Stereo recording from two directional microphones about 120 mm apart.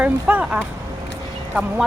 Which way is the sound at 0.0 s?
10° right (ahead or behind).